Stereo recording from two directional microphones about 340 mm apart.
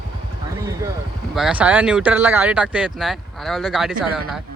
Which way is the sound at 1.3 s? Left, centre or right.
Centre.